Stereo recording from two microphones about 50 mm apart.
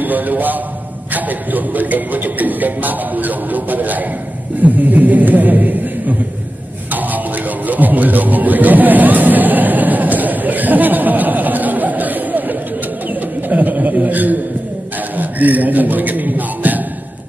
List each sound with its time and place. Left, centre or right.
0.0 s a man's voice: right
6.9 s music: right
13.1 s bird: right
15.1 s a sound: right